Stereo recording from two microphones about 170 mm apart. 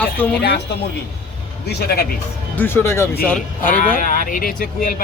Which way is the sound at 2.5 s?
15° left (ahead or behind).